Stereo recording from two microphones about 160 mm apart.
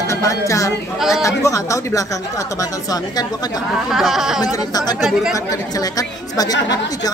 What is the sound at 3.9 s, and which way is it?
Speech, centre (ahead or behind).